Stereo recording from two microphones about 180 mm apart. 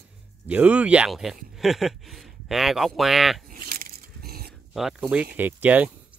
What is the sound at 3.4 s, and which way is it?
Biting, 50° right (ahead or behind).